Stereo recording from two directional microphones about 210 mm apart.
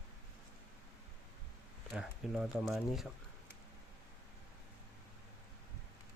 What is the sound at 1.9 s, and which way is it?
Speech, 5° right (ahead or behind).